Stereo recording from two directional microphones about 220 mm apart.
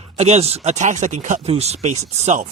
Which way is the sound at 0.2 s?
30° right (ahead or behind).